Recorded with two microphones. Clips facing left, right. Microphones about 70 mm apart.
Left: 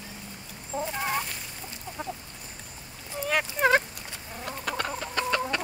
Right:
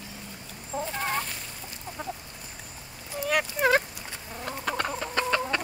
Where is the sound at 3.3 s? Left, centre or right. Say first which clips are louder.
Even; left.